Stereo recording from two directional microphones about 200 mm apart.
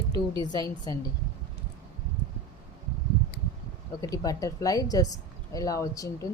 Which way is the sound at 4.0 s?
15° left (ahead or behind).